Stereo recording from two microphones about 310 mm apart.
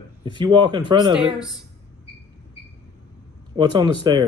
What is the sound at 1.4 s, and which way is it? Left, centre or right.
Speech, centre.